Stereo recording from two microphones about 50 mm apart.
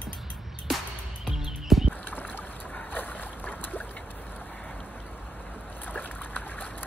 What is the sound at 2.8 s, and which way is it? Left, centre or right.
Boat, left.